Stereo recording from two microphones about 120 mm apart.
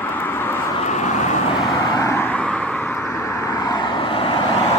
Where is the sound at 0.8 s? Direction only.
80° left.